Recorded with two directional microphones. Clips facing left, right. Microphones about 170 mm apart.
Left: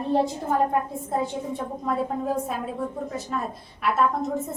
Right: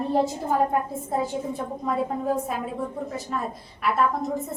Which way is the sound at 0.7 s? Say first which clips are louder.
Even; centre (ahead or behind).